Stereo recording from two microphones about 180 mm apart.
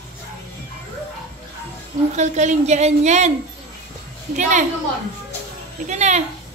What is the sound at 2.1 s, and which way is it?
Speech, 40° right (ahead or behind).